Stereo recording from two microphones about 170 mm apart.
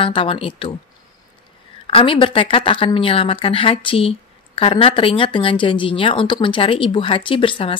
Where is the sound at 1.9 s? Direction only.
30° left (ahead or behind).